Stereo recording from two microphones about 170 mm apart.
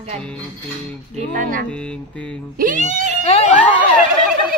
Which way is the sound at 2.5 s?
50° right (ahead or behind).